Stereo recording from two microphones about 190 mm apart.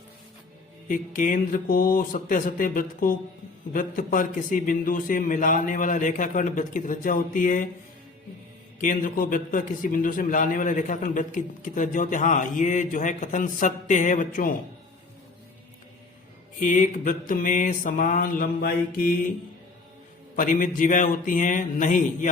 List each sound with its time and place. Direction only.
0.9 s a man's voice: 45° left (ahead or behind)
8.8 s a man's voice: 45° left (ahead or behind)
16.6 s a man's voice: 45° left (ahead or behind)
20.3 s a man's voice: 45° left (ahead or behind)